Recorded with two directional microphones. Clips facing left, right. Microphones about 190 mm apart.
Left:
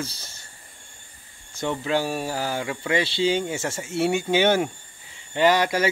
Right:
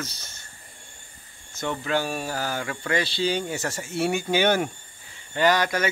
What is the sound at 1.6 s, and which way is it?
Speech, 30° left (ahead or behind).